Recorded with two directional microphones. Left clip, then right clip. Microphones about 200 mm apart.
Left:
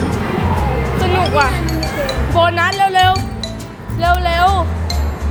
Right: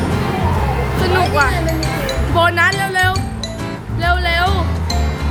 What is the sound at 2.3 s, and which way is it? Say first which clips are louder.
Music: even; 15° right (ahead or behind).